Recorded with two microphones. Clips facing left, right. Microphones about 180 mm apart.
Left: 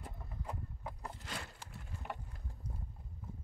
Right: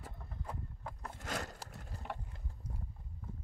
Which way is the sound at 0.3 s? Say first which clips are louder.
Even; 10° left (ahead or behind).